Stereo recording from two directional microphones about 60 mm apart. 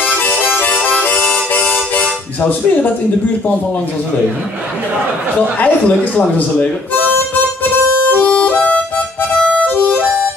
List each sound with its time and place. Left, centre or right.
0.0 s harmonica: left
1.7 s harmonica: left
5.6 s speech: left
8.1 s harmonica: left